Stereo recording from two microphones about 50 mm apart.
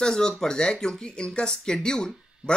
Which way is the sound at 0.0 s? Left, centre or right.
Centre.